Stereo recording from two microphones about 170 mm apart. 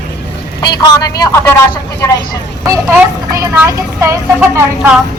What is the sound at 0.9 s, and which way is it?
Speech, 20° left (ahead or behind).